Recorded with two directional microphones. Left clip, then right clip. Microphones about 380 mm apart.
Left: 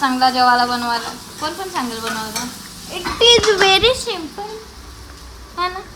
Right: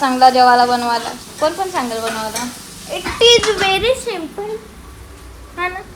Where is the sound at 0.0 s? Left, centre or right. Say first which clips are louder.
Right 4 dB; centre.